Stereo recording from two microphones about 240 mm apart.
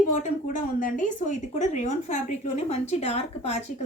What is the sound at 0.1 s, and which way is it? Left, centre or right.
A woman's voice, left.